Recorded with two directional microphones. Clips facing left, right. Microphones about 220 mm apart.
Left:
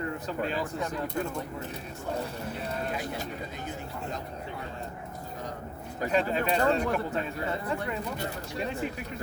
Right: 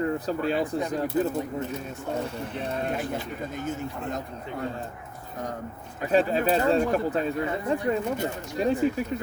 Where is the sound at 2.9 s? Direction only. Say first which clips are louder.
Right 4 dB; 45° right (ahead or behind).